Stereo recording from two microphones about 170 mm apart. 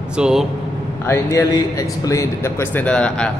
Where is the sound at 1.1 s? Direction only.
15° left (ahead or behind).